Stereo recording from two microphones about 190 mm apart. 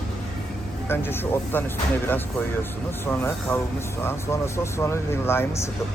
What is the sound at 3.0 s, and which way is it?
Speech, 10° left (ahead or behind).